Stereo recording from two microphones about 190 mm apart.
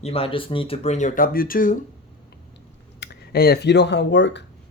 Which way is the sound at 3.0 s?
55° left (ahead or behind).